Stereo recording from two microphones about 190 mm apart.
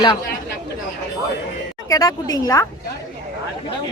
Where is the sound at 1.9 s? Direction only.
20° left (ahead or behind).